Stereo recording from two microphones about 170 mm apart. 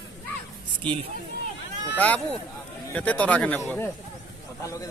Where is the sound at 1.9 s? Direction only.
5° left (ahead or behind).